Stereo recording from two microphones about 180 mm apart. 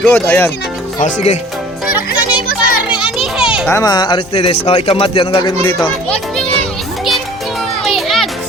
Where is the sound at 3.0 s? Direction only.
5° right (ahead or behind).